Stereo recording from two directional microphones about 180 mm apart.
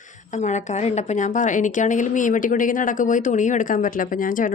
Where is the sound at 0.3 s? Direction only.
40° left (ahead or behind).